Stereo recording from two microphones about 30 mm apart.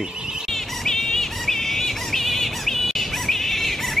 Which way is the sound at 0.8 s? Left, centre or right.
Centre.